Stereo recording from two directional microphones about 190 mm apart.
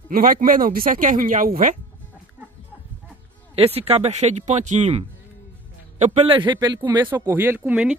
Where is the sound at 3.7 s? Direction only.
35° right (ahead or behind).